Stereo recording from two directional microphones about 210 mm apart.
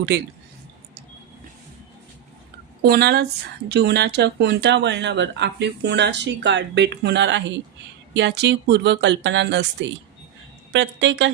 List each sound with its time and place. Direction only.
0.1 s speech: 50° right (ahead or behind)
2.8 s speech: 50° right (ahead or behind)